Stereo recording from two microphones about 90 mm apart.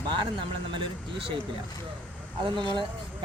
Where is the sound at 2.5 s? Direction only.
65° right (ahead or behind).